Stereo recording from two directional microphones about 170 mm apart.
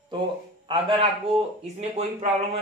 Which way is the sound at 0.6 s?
30° right (ahead or behind).